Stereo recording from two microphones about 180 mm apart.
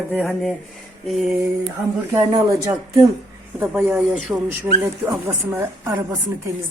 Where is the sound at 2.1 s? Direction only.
20° right (ahead or behind).